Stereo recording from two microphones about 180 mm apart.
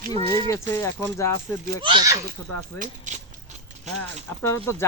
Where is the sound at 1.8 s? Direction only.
25° right (ahead or behind).